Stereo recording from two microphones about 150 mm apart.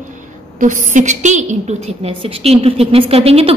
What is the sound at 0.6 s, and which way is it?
A woman's voice, 60° right (ahead or behind).